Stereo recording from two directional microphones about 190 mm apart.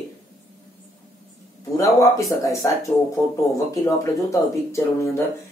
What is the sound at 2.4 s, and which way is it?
Speech, 15° left (ahead or behind).